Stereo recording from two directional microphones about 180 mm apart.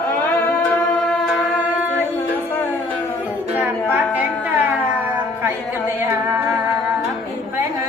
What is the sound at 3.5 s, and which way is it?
Music, 10° right (ahead or behind).